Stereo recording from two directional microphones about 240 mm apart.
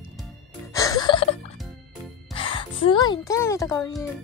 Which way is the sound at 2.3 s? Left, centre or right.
Left.